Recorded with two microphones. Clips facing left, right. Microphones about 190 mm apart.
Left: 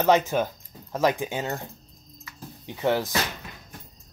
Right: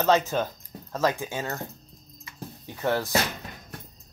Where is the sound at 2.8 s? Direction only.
15° left (ahead or behind).